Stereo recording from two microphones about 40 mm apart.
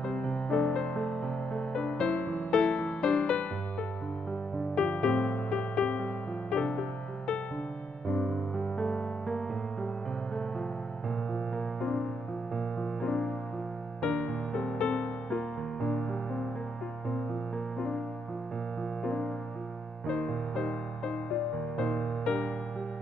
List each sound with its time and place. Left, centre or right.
0.0 s music: left
4.7 s music: left
11.3 s music: centre
17.7 s music: centre
19.0 s music: centre